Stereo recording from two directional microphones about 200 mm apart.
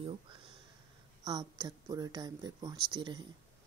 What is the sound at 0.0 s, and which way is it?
Speech, 30° right (ahead or behind).